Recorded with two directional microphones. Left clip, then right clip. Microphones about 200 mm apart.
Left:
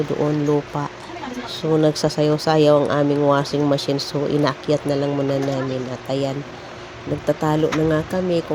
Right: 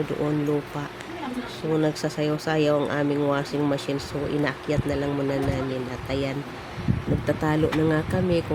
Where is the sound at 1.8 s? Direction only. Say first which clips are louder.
Left 7 dB; 20° left (ahead or behind).